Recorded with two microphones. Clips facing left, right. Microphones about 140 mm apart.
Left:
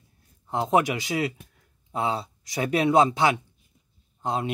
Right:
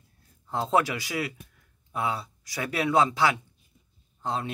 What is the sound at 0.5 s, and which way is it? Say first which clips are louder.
A man's voice: left 2 dB; 20° left (ahead or behind).